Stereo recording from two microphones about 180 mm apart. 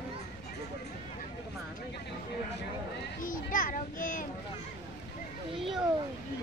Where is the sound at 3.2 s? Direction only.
50° left (ahead or behind).